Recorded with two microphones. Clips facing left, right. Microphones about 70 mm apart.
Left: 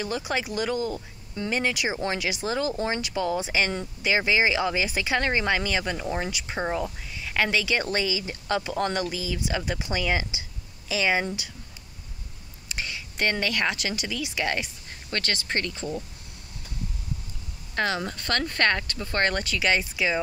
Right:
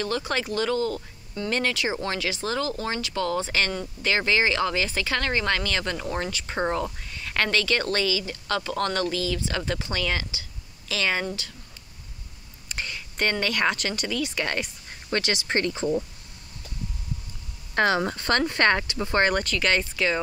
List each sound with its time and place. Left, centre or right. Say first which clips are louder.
0.0 s speech: right 1 dB; centre
12.6 s speech: even; centre
15.0 s speech: right 3 dB; centre
17.7 s speech: right 5 dB; right; by 19.2 s centre
19.4 s speech: even; centre